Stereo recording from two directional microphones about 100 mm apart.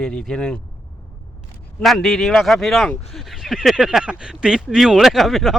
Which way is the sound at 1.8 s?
Centre (ahead or behind).